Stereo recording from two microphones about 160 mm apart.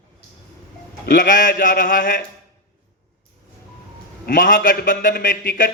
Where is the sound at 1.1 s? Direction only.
55° left (ahead or behind).